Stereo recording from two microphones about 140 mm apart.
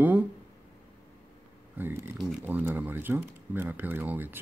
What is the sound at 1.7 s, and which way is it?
Speech, 15° right (ahead or behind).